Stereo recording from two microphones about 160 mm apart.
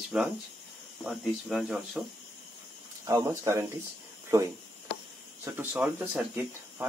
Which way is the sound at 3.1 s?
15° right (ahead or behind).